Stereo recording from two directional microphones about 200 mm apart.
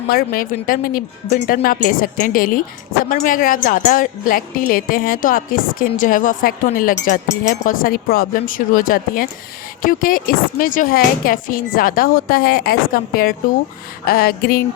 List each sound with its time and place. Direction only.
0.1 s speech: 45° left (ahead or behind)